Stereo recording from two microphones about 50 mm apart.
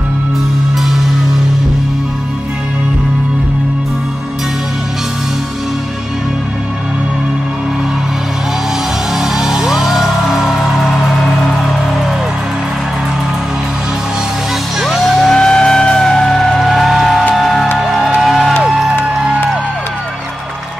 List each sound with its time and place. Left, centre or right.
9.1 s music: centre
14.8 s music: centre
15.3 s music: centre